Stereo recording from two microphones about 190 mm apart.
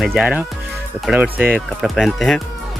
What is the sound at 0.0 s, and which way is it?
Speech, centre (ahead or behind).